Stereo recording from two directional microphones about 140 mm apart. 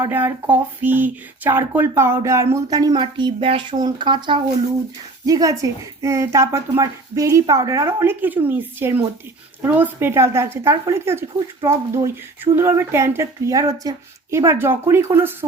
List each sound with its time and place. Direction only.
0.0 s speech: 15° right (ahead or behind)